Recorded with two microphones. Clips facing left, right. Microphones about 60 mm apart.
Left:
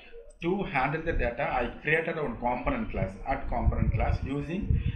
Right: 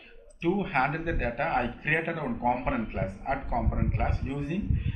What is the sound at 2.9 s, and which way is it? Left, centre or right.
Speech, centre.